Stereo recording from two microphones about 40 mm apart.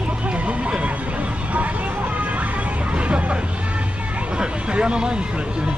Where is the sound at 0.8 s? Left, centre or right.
Right.